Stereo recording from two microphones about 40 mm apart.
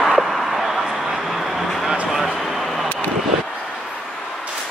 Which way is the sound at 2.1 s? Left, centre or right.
Centre.